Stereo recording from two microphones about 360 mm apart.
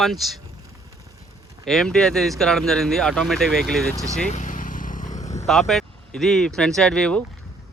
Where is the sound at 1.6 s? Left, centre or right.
Centre.